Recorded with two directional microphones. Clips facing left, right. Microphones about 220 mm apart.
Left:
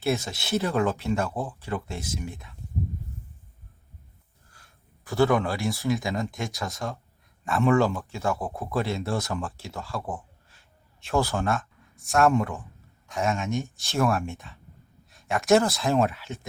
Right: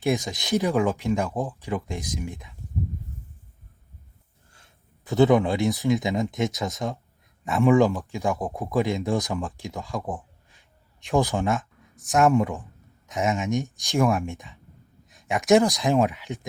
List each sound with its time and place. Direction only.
0.0 s speech: 15° right (ahead or behind)
4.5 s a sound: 20° right (ahead or behind)
5.7 s speech: 20° right (ahead or behind)